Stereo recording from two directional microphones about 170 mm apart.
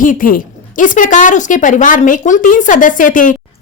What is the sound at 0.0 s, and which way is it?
Speech, 55° left (ahead or behind).